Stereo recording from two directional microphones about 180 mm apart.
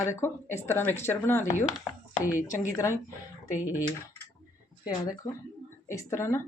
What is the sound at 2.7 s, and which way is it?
Speech, 15° left (ahead or behind).